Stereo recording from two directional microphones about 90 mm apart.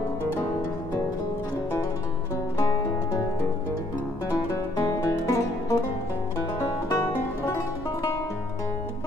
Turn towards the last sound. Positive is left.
turn(degrees=30)  # may be behind; listen again after turning